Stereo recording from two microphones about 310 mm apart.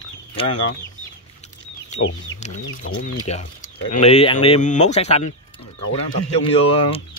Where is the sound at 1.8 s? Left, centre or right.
Left.